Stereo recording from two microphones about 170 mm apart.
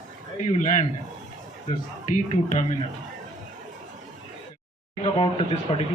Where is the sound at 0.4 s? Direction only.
45° left (ahead or behind).